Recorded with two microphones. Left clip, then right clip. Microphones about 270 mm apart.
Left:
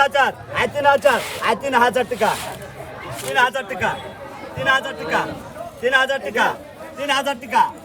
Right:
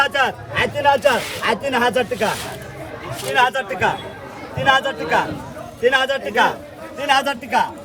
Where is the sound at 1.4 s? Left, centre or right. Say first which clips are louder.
Left 1 dB; centre.